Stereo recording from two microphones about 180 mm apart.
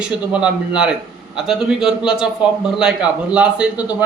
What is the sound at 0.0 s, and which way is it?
A man's voice, 5° right (ahead or behind).